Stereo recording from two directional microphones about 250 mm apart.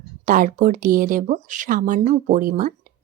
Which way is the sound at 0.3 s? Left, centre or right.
Right.